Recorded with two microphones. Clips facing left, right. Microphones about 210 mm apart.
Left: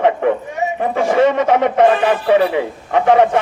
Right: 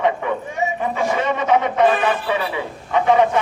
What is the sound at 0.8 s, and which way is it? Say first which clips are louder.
Speech: left 10 dB; 50° left (ahead or behind).